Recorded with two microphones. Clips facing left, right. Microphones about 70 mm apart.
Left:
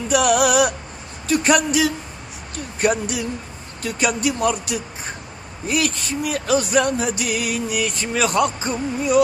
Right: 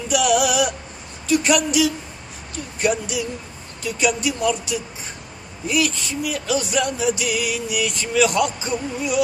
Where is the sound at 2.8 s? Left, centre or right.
Left.